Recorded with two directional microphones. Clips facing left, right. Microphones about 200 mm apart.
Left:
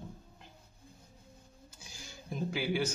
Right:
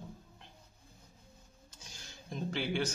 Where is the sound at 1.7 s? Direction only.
10° left (ahead or behind).